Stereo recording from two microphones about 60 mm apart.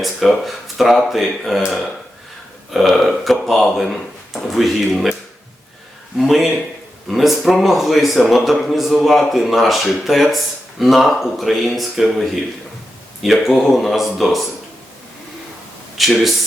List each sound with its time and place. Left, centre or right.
0.0 s speech: centre
6.1 s speech: centre
16.0 s speech: centre